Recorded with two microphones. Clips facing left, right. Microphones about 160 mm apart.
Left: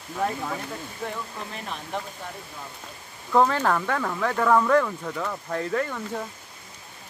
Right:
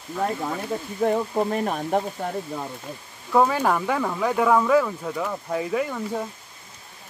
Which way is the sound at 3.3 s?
10° right (ahead or behind).